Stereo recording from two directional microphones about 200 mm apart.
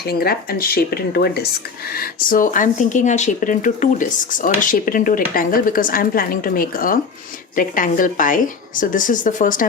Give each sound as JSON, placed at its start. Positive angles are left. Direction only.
{"t": 0.1, "sound": "speech", "side_deg": 50}